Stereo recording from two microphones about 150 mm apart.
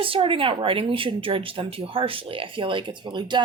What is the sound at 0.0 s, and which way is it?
Speech, 35° right (ahead or behind).